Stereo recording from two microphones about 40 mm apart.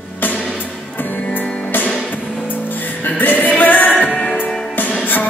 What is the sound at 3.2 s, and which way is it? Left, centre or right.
Music, left.